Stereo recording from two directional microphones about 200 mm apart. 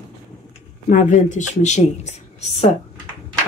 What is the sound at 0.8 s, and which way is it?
Speech, 40° left (ahead or behind).